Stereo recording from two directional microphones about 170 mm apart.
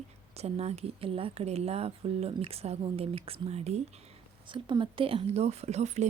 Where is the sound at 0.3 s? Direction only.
40° right (ahead or behind).